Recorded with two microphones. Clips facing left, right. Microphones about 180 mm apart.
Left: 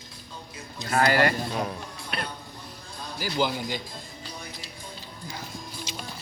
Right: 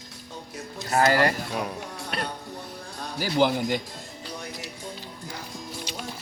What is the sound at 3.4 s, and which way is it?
Speech, 60° right (ahead or behind).